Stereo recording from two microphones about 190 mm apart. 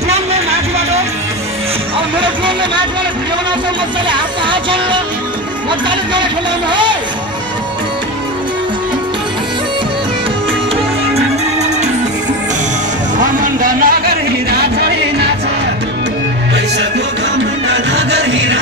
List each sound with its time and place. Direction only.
0.1 s music: 35° right (ahead or behind)
2.1 s music: 25° right (ahead or behind)
4.1 s speech: 25° right (ahead or behind)
6.7 s speech: 25° right (ahead or behind)
13.4 s music: 45° right (ahead or behind)
17.9 s chant: 65° right (ahead or behind)